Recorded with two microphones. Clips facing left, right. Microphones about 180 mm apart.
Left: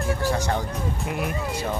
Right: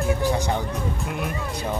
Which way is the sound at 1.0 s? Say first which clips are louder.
Left 1 dB; centre (ahead or behind).